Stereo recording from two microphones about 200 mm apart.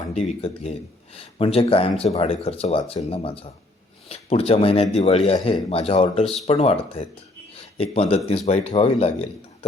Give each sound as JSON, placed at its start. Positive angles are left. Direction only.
{"t": 0.1, "sound": "speech", "side_deg": 30}